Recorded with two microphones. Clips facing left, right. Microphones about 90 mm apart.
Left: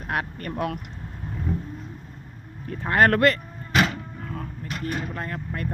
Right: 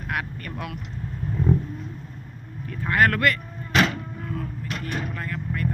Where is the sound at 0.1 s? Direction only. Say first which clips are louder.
Left 2 dB; 35° left (ahead or behind).